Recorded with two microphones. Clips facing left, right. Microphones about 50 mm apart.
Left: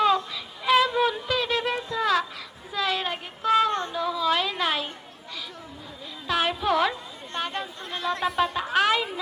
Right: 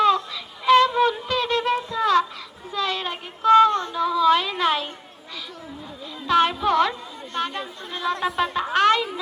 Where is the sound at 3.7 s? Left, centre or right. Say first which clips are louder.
Right 3 dB; left.